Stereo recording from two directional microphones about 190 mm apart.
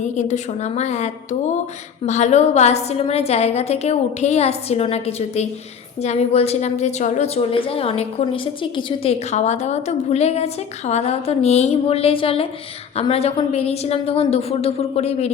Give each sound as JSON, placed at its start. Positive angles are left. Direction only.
{"t": 0.2, "sound": "a woman's voice", "side_deg": 40}